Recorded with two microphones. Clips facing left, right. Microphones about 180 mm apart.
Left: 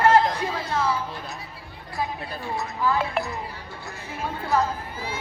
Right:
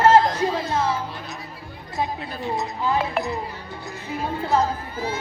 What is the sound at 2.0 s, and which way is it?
Speech, 20° right (ahead or behind).